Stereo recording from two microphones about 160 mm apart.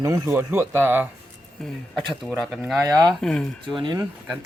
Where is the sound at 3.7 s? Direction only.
30° right (ahead or behind).